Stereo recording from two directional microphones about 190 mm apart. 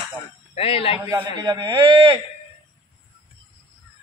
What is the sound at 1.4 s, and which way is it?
Speech, 25° right (ahead or behind).